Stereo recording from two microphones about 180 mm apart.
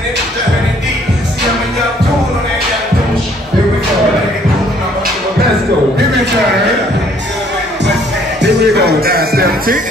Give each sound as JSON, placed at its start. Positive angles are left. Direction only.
{"t": 8.4, "sound": "music", "side_deg": -65}